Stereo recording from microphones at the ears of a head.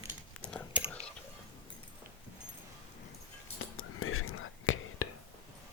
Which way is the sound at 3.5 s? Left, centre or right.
Left.